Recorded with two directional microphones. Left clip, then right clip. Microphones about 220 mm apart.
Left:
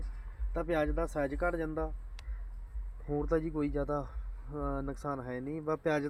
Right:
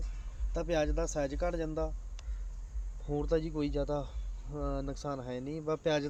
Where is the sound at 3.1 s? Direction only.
25° left (ahead or behind).